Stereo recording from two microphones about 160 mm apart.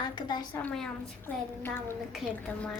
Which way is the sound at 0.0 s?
30° left (ahead or behind).